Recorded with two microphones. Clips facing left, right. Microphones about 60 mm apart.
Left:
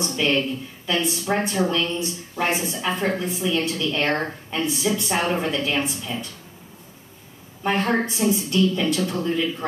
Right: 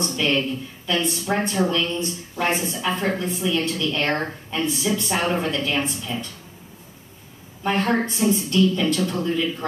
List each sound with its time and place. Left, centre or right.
0.1 s a woman's voice: centre
7.6 s a woman's voice: centre